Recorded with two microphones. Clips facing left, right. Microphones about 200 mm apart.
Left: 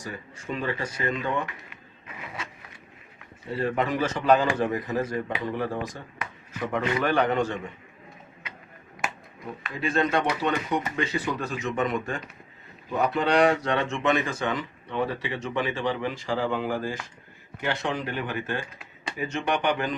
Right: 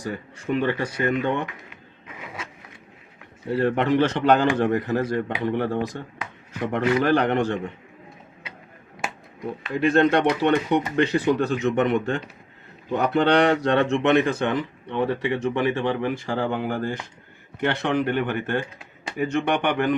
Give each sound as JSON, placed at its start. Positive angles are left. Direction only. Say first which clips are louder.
{"t": 0.0, "sound": "speech", "louder": "right 6 dB", "side_deg": -65}
{"t": 3.5, "sound": "speech", "louder": "right 6 dB", "side_deg": -75}
{"t": 9.7, "sound": "speech", "louder": "right 7 dB", "side_deg": -65}